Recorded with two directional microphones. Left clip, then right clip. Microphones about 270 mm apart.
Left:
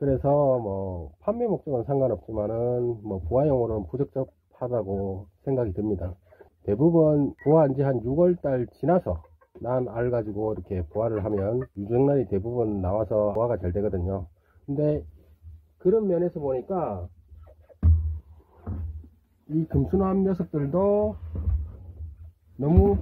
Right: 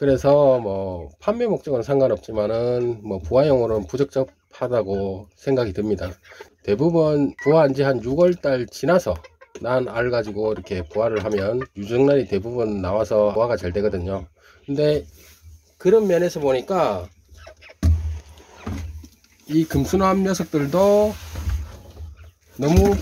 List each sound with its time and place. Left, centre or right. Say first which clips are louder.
0.0 s speech: right 7 dB; centre
15.8 s speech: right 6 dB; centre
20.0 s speech: right 7 dB; centre
20.3 s speech: right 7 dB; centre